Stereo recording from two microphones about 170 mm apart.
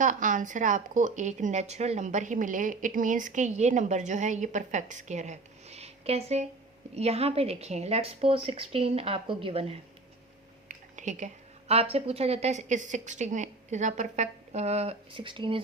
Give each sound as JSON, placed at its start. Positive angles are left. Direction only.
{"t": 0.0, "sound": "a woman's voice", "side_deg": -50}
{"t": 10.7, "sound": "a sound", "side_deg": -45}
{"t": 11.7, "sound": "a woman's voice", "side_deg": -35}